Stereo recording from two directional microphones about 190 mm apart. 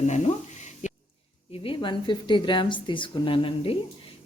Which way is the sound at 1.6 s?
25° left (ahead or behind).